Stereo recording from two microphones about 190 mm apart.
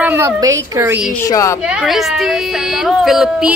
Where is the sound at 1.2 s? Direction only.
15° left (ahead or behind).